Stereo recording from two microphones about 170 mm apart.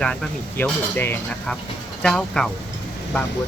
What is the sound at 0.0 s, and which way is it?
Speech, 5° left (ahead or behind).